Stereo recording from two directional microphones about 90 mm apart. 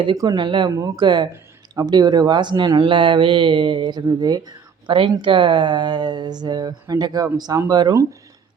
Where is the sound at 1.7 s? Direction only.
50° right (ahead or behind).